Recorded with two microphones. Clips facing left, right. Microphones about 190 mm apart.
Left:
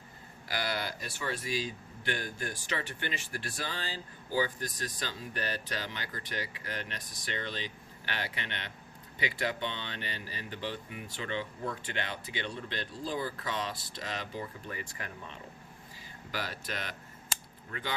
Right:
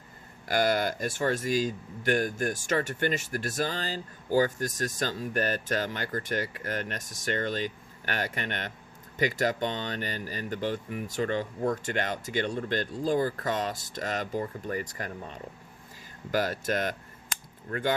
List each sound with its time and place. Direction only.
0.4 s speech: 45° right (ahead or behind)